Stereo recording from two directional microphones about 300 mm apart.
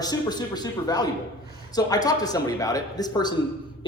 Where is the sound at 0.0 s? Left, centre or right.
Centre.